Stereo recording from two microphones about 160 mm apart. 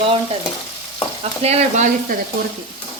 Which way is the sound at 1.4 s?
40° right (ahead or behind).